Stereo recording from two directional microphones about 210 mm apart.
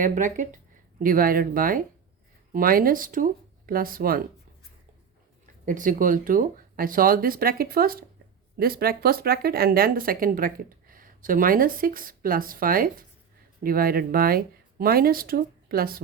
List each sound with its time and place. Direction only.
0.0 s speech: 35° right (ahead or behind)
5.6 s speech: 40° right (ahead or behind)